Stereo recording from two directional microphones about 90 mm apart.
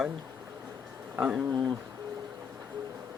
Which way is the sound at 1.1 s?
10° right (ahead or behind).